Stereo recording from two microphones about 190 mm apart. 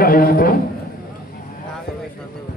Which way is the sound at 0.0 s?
50° left (ahead or behind).